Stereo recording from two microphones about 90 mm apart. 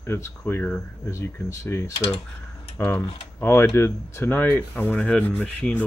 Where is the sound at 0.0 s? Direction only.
25° left (ahead or behind).